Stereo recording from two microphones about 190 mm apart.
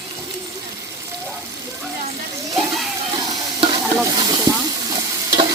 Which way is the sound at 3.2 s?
25° right (ahead or behind).